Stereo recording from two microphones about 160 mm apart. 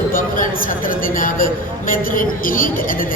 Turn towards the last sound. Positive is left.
turn(degrees=60)  # may be behind; listen again after turning